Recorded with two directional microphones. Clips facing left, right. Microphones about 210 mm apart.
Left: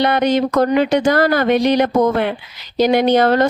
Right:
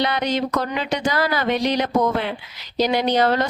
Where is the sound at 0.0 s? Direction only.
55° left (ahead or behind).